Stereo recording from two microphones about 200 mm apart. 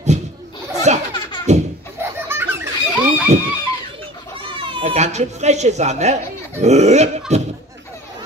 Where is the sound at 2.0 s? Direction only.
10° right (ahead or behind).